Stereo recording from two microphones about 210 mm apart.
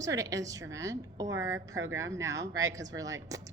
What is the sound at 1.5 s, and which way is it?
Speech, 65° right (ahead or behind).